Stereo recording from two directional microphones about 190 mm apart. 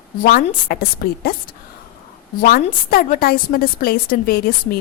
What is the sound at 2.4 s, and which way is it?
Speech, 50° left (ahead or behind).